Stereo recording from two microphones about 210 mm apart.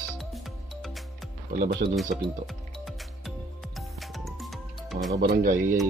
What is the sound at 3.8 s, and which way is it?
Music, centre (ahead or behind).